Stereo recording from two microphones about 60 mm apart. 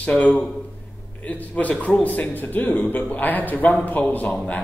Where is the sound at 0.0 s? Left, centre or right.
Left.